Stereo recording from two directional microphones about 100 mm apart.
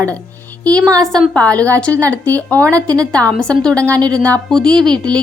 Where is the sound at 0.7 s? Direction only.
40° right (ahead or behind).